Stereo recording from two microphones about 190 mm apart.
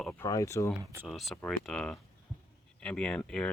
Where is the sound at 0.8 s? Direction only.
15° right (ahead or behind).